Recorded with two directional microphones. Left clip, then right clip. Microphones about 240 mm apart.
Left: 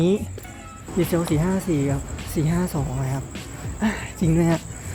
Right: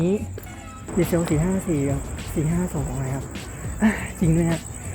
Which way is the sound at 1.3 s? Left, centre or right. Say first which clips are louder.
Left 1 dB; centre.